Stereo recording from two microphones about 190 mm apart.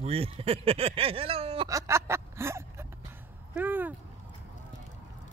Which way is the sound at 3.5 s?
10° right (ahead or behind).